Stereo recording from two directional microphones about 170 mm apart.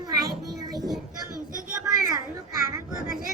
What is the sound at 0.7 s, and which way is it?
Music, centre (ahead or behind).